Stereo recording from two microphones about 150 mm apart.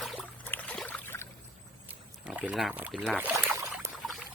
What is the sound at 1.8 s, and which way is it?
Pig, 10° right (ahead or behind).